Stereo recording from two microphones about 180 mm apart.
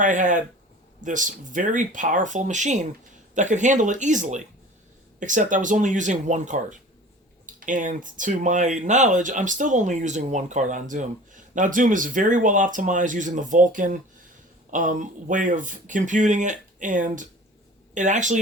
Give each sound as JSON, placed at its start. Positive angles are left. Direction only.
{"t": 0.0, "sound": "speech", "side_deg": -45}